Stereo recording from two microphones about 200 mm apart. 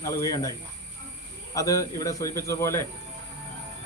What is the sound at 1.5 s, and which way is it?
A man's voice, 15° left (ahead or behind).